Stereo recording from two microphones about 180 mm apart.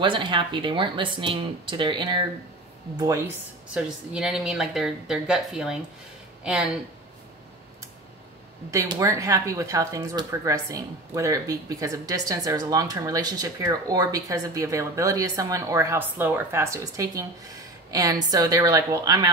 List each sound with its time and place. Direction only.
0.0 s speech: 25° right (ahead or behind)
3.6 s speech: 5° right (ahead or behind)
8.6 s speech: 15° right (ahead or behind)